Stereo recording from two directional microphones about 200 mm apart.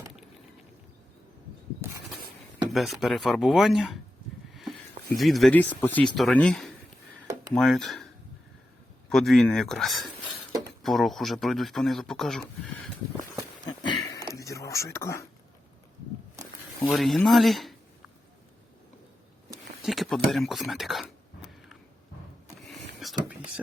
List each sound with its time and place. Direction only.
2.7 s speech: centre (ahead or behind)
5.1 s speech: centre (ahead or behind)
13.7 s a sound: 20° left (ahead or behind)
14.3 s whispering: 15° left (ahead or behind)
16.9 s speech: centre (ahead or behind)
19.8 s a sound: centre (ahead or behind)
23.0 s whispering: centre (ahead or behind)